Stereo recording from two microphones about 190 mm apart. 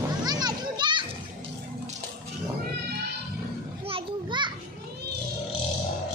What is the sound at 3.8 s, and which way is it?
Children playing, 25° right (ahead or behind).